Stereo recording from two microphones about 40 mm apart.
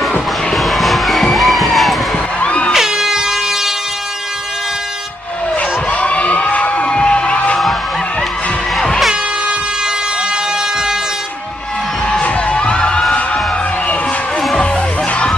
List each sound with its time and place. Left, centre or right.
0.6 s music: centre
2.4 s music: left
3.0 s air horn: centre
5.9 s music: left
12.4 s crowd: left